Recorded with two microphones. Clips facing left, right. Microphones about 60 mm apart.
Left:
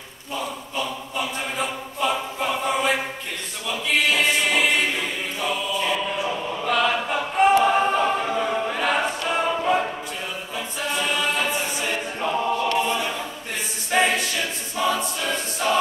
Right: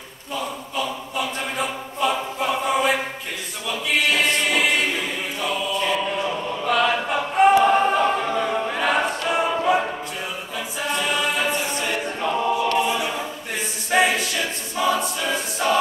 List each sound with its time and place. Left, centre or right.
0.3 s a sound: centre
3.6 s a capella: centre
10.8 s choir: centre